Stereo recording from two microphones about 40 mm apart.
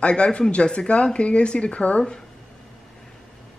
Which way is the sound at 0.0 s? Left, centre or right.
Left.